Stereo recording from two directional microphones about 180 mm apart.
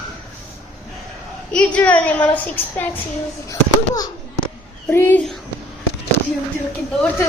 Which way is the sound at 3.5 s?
20° left (ahead or behind).